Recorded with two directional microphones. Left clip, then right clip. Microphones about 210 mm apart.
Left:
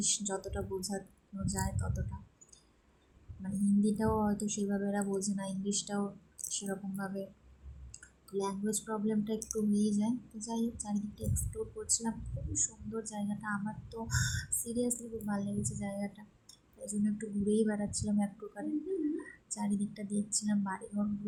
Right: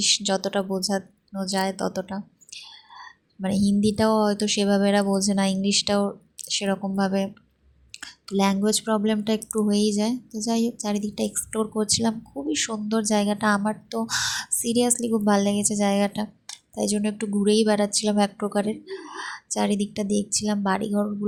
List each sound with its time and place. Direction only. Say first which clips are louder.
0.0 s speech: right 14 dB; 35° right (ahead or behind)
3.4 s speech: right 10 dB; 40° right (ahead or behind)